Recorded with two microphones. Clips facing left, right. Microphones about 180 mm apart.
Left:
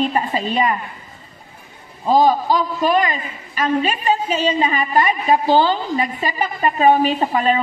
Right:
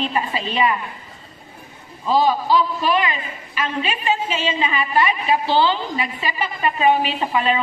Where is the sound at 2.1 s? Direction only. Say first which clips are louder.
Left 3 dB; 45° left (ahead or behind).